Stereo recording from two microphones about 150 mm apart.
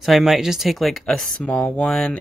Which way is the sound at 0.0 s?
Centre (ahead or behind).